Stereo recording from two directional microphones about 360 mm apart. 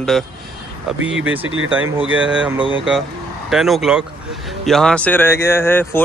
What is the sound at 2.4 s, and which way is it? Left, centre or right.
Speech, centre.